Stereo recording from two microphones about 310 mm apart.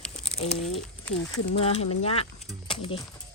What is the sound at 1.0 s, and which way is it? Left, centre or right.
Speech, centre.